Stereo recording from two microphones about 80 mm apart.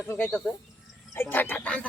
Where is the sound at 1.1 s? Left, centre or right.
Left.